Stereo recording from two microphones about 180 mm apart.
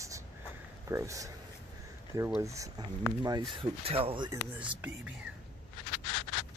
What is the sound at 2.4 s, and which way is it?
Speech, 15° right (ahead or behind).